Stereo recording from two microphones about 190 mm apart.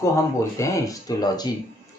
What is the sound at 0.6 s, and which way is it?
Speech, 15° left (ahead or behind).